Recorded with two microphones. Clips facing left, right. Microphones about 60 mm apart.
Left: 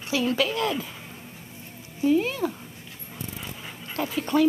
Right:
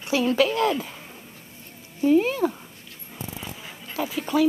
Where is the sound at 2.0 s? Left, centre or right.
Right.